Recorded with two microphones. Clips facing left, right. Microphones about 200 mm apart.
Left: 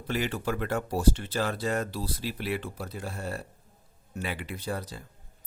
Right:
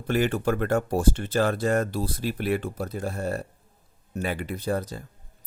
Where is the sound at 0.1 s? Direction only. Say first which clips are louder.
Right 6 dB; 50° right (ahead or behind).